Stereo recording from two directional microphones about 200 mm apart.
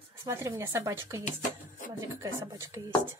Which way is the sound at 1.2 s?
40° left (ahead or behind).